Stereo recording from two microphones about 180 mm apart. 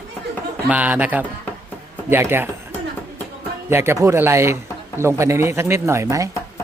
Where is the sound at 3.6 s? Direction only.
15° right (ahead or behind).